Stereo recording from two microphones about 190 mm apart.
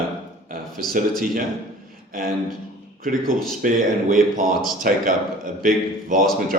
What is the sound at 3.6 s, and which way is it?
Speech, 45° right (ahead or behind).